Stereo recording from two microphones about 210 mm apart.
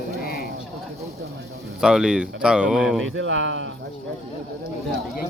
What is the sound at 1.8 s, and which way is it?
Speech, 5° right (ahead or behind).